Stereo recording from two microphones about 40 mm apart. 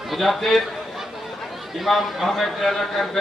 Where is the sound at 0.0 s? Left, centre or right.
Centre.